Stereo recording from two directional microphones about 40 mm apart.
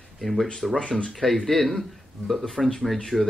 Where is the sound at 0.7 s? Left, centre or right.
Left.